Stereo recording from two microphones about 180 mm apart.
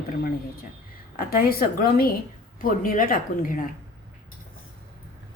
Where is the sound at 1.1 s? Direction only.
55° left (ahead or behind).